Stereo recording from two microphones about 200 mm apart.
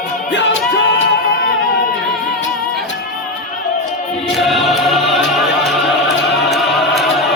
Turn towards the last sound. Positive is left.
turn(degrees=0)  # may be behind; listen again after turning